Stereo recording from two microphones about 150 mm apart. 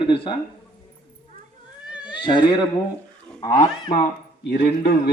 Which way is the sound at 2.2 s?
30° left (ahead or behind).